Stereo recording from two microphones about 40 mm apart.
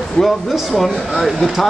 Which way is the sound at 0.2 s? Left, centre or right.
Left.